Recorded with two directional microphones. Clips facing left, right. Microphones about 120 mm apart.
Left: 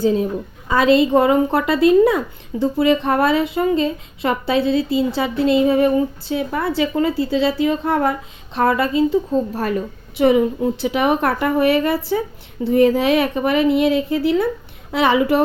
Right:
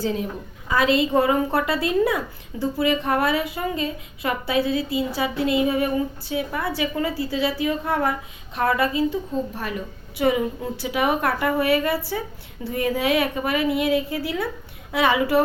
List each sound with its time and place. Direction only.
0.7 s speech: 25° left (ahead or behind)
9.0 s a woman's voice: 35° left (ahead or behind)
10.2 s speech: 25° left (ahead or behind)